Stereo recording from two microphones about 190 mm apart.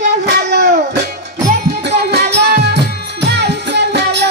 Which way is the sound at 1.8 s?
60° right (ahead or behind).